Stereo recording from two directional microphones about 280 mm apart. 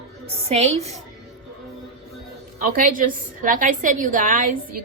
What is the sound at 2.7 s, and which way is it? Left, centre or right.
A woman's voice, right.